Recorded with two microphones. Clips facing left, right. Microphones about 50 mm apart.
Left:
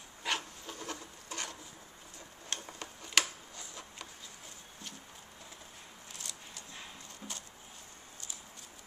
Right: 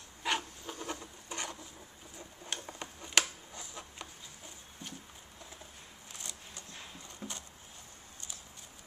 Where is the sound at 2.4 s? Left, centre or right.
Centre.